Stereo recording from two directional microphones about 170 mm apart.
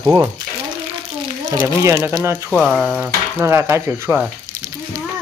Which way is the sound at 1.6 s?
15° right (ahead or behind).